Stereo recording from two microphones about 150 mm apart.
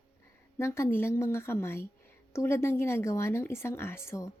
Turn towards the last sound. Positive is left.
turn(degrees=20)  # may be behind; listen again after turning